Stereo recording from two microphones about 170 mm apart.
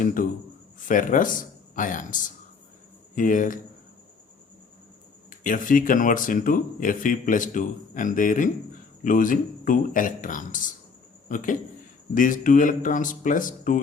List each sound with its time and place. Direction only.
0.0 s a sound: 50° left (ahead or behind)
0.8 s speech: 50° left (ahead or behind)
5.3 s speech: 55° left (ahead or behind)